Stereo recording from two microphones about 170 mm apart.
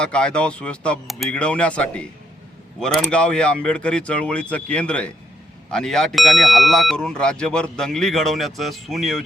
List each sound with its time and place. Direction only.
0.0 s speech: 5° left (ahead or behind)